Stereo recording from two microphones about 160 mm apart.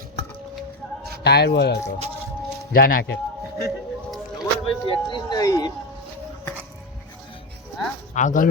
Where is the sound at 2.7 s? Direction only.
65° left (ahead or behind).